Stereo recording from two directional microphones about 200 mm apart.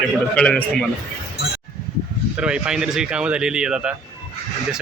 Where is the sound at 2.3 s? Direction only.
5° right (ahead or behind).